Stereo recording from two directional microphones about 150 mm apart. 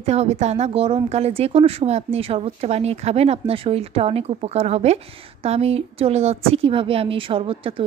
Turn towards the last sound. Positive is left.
turn(degrees=-35)  # may be behind; listen again after turning